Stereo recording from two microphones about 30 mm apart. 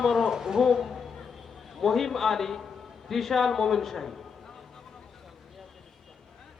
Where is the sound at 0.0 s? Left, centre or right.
Centre.